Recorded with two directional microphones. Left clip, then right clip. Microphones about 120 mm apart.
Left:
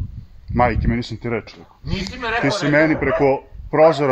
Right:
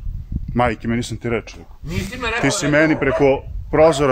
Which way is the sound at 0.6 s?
20° right (ahead or behind).